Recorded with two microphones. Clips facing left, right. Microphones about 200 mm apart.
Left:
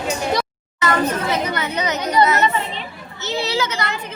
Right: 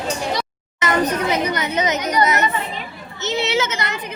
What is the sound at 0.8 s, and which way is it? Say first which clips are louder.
A child's voice: even; 20° right (ahead or behind).